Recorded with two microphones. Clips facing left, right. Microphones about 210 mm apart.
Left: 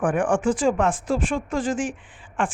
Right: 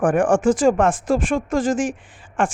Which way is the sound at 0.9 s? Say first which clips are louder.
Right 5 dB; 90° right.